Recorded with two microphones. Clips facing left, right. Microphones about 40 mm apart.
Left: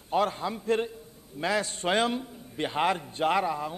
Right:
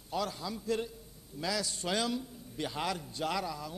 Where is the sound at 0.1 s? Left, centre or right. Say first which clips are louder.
Left 9 dB; left.